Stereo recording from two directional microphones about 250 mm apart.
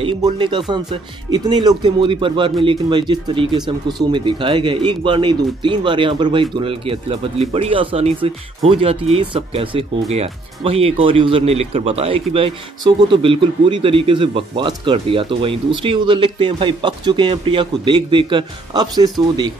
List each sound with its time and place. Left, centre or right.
0.0 s speech: centre